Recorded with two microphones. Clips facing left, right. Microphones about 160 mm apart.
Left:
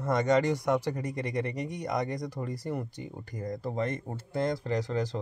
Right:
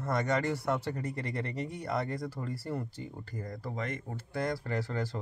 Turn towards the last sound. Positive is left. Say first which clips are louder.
# left 4 dB
turn(degrees=15)  # may be behind; listen again after turning